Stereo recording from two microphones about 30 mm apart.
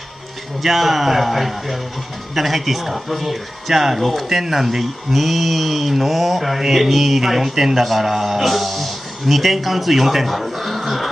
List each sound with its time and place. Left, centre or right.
0.6 s a man's voice: centre